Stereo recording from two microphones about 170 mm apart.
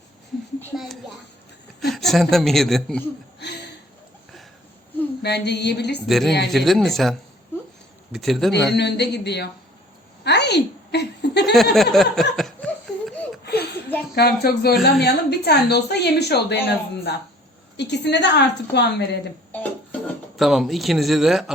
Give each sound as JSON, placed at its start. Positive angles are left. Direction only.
{"t": 0.7, "sound": "a woman's voice", "side_deg": 0}
{"t": 5.2, "sound": "a woman's voice", "side_deg": 80}
{"t": 6.1, "sound": "speech", "side_deg": 0}
{"t": 8.7, "sound": "a woman's voice", "side_deg": 80}
{"t": 10.2, "sound": "a sound", "side_deg": 80}
{"t": 11.5, "sound": "laughter", "side_deg": 0}
{"t": 13.4, "sound": "a sound", "side_deg": 70}
{"t": 14.2, "sound": "a woman's voice", "side_deg": 70}
{"t": 17.7, "sound": "a woman's voice", "side_deg": 90}
{"t": 19.5, "sound": "music", "side_deg": 10}
{"t": 20.3, "sound": "speech", "side_deg": 0}